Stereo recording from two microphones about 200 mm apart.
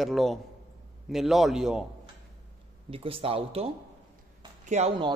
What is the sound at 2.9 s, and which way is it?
Speech, 25° right (ahead or behind).